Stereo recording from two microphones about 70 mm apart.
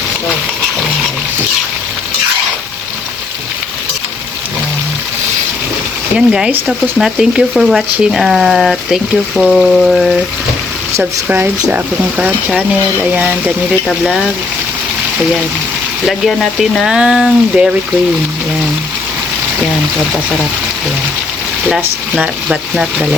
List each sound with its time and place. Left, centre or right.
6.1 s speech: centre
11.3 s speech: right
14.0 s speech: centre
16.0 s speech: centre
22.1 s speech: centre